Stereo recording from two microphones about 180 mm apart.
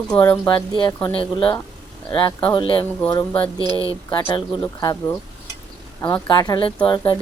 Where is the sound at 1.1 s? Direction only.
30° left (ahead or behind).